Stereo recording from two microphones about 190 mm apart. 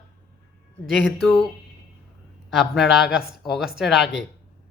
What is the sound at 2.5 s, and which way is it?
Speech, centre (ahead or behind).